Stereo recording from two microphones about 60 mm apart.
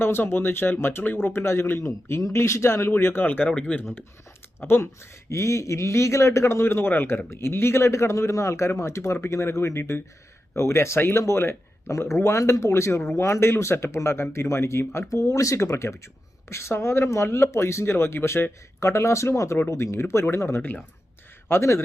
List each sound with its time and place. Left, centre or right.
0.0 s speech: left
2.9 s speech: left
3.5 s speech: left
4.6 s speech: left
5.3 s speech: left
18.8 s speech: left
21.6 s speech: left